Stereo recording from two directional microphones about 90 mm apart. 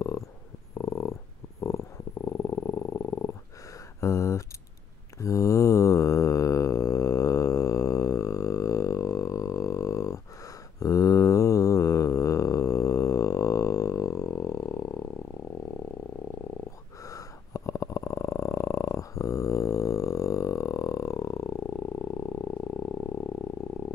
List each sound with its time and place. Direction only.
0.7 s dog: 35° left (ahead or behind)
2.2 s purr: 35° left (ahead or behind)
4.0 s a sound: 35° left (ahead or behind)
5.2 s mantra: 35° left (ahead or behind)
17.0 s purr: 35° left (ahead or behind)